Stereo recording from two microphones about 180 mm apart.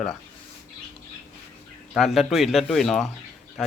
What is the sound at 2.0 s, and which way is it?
Speech, centre (ahead or behind).